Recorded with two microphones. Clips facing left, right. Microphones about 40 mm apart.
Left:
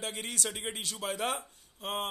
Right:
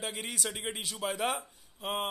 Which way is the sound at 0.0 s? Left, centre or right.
Centre.